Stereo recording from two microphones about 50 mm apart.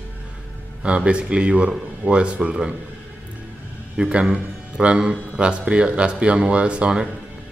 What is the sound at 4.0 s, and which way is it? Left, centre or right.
A man's voice, centre.